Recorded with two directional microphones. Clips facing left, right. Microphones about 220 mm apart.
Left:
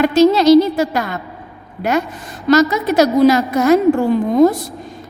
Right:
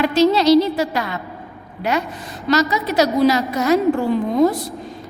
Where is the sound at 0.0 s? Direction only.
45° left (ahead or behind).